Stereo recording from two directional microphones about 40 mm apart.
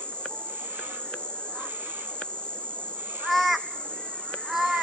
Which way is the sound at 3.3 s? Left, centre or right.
Centre.